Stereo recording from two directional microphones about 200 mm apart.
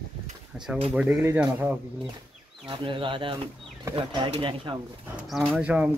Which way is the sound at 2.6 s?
25° right (ahead or behind).